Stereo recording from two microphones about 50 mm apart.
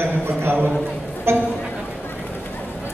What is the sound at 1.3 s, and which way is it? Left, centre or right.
Speech, right.